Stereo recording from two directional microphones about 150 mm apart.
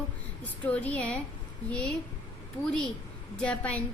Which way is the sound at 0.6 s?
10° left (ahead or behind).